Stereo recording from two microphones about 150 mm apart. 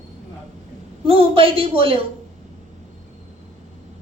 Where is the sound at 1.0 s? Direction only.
40° right (ahead or behind).